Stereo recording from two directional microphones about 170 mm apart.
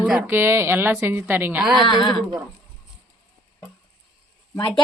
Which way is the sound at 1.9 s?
25° left (ahead or behind).